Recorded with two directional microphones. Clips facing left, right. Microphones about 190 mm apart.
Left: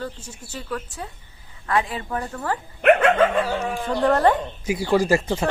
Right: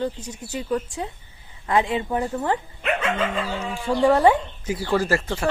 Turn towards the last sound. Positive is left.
turn(degrees=20)  # may be behind; listen again after turning